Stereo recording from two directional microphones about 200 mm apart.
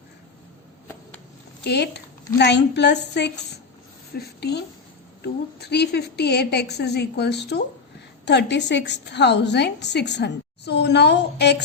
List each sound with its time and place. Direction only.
1.6 s a woman's voice: 55° left (ahead or behind)